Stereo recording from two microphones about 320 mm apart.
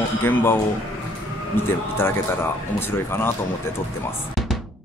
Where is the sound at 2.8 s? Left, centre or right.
Centre.